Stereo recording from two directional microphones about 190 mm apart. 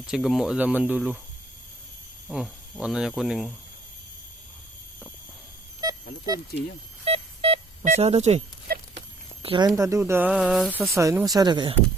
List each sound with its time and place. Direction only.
0.0 s speech: 5° right (ahead or behind)
2.2 s speech: centre (ahead or behind)
5.8 s a sound: 20° right (ahead or behind)
7.0 s telephone dialing: 30° right (ahead or behind)
9.0 s speech: 30° right (ahead or behind); by 10.7 s 5° right (ahead or behind)
10.8 s speech: 15° right (ahead or behind)